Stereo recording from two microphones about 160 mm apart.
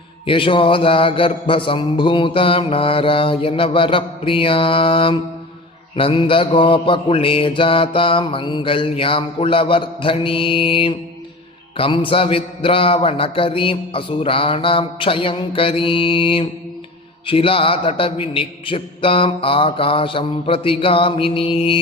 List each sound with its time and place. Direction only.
0.3 s mantra: 30° left (ahead or behind)